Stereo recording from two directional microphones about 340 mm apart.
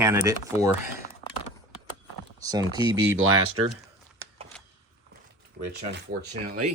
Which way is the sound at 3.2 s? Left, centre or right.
Right.